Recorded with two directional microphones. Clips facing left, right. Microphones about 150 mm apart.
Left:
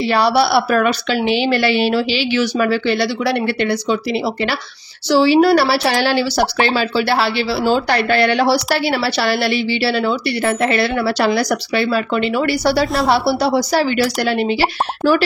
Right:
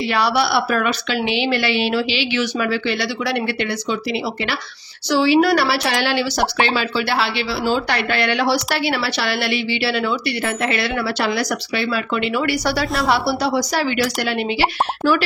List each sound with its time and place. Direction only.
0.1 s a woman's voice: 35° left (ahead or behind)
5.1 s a woman's voice: 35° left (ahead or behind)